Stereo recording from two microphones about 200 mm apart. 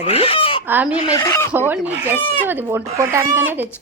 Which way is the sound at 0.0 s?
30° left (ahead or behind).